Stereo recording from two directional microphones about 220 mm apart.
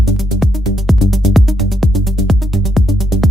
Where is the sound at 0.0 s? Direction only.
Centre (ahead or behind).